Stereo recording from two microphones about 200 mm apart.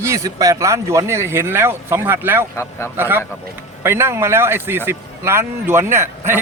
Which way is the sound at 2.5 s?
10° left (ahead or behind).